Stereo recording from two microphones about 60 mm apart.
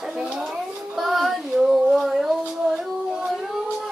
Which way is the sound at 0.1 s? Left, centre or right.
Centre.